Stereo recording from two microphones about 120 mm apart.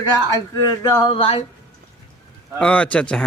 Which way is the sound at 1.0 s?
55° left (ahead or behind).